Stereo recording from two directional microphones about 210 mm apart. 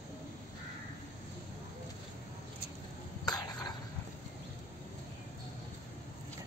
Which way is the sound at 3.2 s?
20° left (ahead or behind).